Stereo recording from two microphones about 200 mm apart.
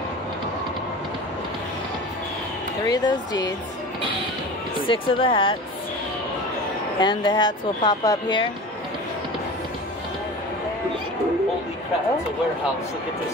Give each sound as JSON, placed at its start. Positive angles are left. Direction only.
{"t": 2.9, "sound": "speech", "side_deg": 20}
{"t": 4.8, "sound": "speech", "side_deg": 25}
{"t": 7.0, "sound": "speech", "side_deg": 20}